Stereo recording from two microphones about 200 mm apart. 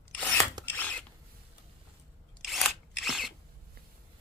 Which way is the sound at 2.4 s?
Centre (ahead or behind).